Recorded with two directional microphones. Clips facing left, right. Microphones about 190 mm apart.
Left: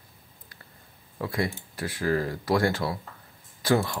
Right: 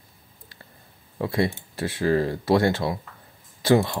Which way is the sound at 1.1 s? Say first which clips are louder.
Right 5 dB; 25° right (ahead or behind).